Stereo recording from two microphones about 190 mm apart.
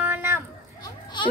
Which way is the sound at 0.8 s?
25° left (ahead or behind).